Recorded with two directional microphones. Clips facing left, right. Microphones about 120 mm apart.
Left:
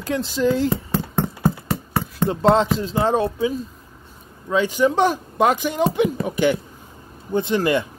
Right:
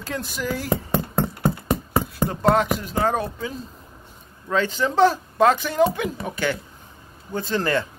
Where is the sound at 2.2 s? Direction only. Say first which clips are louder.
Left 4 dB; 25° left (ahead or behind).